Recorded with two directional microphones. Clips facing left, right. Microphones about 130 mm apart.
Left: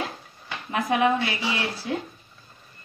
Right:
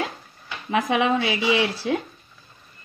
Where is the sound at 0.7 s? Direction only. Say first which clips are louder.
Right 1 dB; 90° right.